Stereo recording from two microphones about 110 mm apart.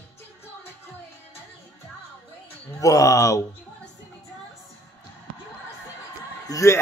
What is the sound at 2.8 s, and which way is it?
Speech, 30° left (ahead or behind).